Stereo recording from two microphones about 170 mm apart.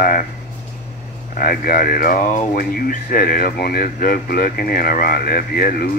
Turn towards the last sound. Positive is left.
turn(degrees=60)  # may be behind; listen again after turning